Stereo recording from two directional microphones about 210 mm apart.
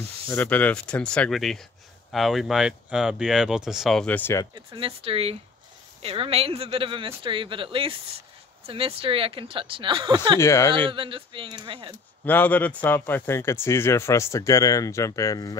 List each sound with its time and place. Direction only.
0.3 s speech: 10° left (ahead or behind)
4.6 s speech: 25° right (ahead or behind)
10.4 s speech: 15° left (ahead or behind)
10.9 s speech: 25° right (ahead or behind)
12.3 s speech: 10° left (ahead or behind)